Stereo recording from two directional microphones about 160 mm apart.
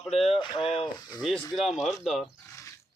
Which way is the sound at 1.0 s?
25° left (ahead or behind).